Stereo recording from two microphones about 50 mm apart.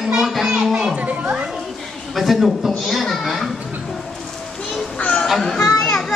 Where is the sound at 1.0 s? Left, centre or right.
Right.